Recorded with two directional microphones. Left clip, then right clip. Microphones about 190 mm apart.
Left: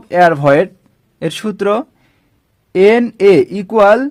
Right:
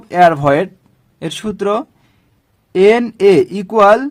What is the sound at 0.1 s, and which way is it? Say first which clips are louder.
Speech: left 1 dB; 15° left (ahead or behind).